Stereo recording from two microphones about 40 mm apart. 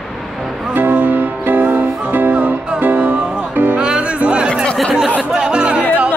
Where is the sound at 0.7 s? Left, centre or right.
Right.